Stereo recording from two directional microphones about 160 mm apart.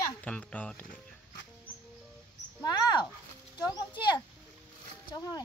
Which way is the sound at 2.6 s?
25° left (ahead or behind).